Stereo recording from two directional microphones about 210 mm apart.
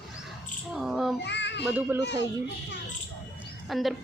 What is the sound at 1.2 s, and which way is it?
Child singing, 55° left (ahead or behind).